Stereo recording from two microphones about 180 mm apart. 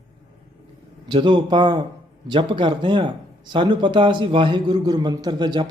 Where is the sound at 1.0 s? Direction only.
25° right (ahead or behind).